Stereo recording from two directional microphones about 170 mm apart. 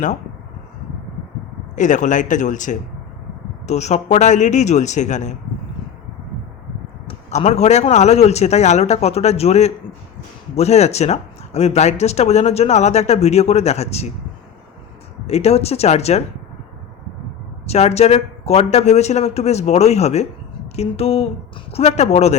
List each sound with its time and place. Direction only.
1.7 s a man's voice: 45° left (ahead or behind)
7.1 s speech: 40° left (ahead or behind)
15.3 s speech: 40° left (ahead or behind)
17.7 s speech: 40° left (ahead or behind)